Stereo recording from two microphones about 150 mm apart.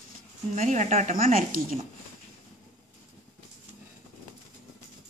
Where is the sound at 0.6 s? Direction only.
50° right (ahead or behind).